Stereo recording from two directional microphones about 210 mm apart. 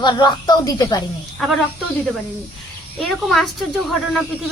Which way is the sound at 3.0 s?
Centre (ahead or behind).